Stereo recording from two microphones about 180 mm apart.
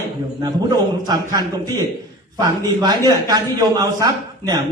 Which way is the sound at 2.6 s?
20° right (ahead or behind).